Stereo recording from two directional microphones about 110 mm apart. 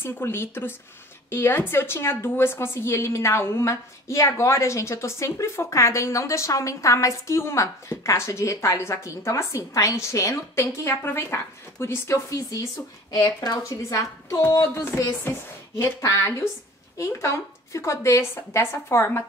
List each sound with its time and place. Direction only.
0.0 s a woman's voice: 20° left (ahead or behind)